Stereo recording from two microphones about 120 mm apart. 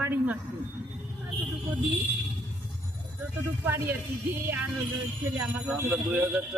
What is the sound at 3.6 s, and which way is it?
Speech, 15° right (ahead or behind).